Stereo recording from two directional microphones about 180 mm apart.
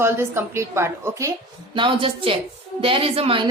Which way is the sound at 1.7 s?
30° right (ahead or behind).